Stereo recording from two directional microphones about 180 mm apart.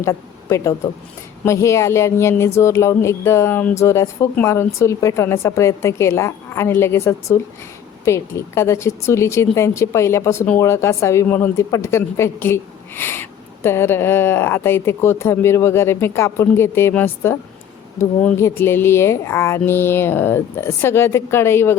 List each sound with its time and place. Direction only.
0.0 s a woman's voice: 15° left (ahead or behind)